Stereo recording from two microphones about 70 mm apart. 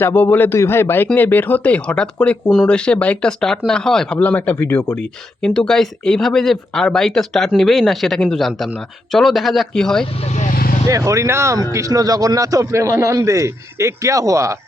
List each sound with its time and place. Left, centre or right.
0.0 s a man's voice: left; by 4.2 s centre
4.2 s speech: left
4.5 s a man's voice: left
4.9 s speech: centre
10.8 s a man's voice: right
11.7 s a man's voice: right